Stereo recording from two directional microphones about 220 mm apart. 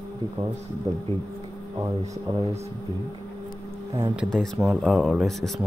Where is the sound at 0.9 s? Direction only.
15° right (ahead or behind).